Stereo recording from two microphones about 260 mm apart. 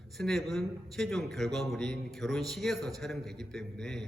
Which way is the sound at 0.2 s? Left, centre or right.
Centre.